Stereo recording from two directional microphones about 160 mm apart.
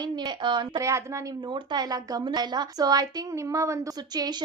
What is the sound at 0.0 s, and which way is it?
A woman's voice, 25° right (ahead or behind).